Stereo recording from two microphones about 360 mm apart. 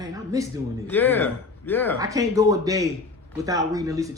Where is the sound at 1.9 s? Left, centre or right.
Centre.